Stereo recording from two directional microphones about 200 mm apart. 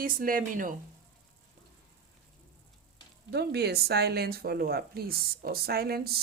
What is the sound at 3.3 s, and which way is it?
Speech, 55° right (ahead or behind).